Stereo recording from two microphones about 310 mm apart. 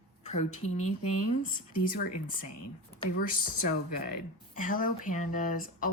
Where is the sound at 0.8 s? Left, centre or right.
Left.